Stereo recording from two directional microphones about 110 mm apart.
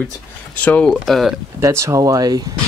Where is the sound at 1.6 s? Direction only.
25° right (ahead or behind).